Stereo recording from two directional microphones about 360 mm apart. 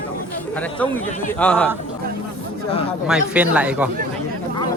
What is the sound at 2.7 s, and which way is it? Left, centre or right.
Speech, centre.